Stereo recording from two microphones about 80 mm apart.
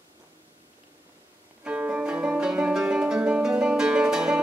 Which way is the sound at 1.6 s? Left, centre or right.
Centre.